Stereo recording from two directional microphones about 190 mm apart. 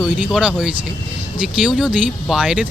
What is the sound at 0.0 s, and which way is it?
Speech, 5° right (ahead or behind).